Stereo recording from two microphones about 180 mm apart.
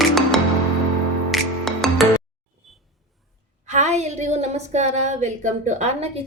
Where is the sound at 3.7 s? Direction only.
40° right (ahead or behind).